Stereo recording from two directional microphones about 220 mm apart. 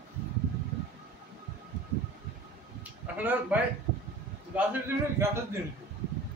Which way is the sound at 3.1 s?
5° right (ahead or behind).